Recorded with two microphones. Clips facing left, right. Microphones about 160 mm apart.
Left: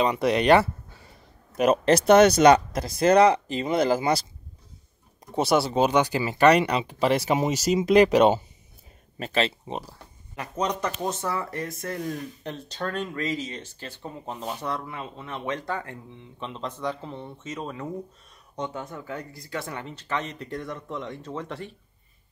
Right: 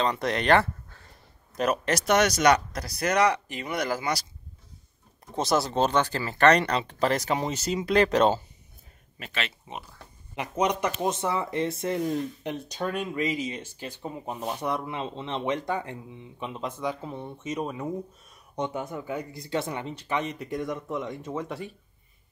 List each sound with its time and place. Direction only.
0.0 s speech: 10° left (ahead or behind)
1.7 s speech: 30° left (ahead or behind)
5.3 s speech: 5° left (ahead or behind)
9.2 s speech: 35° left (ahead or behind)
10.3 s speech: 20° right (ahead or behind)